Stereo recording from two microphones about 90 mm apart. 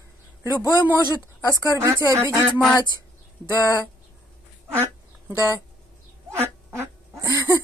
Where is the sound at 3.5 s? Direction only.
40° left (ahead or behind).